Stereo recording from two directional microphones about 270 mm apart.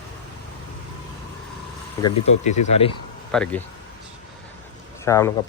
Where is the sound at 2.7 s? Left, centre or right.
Left.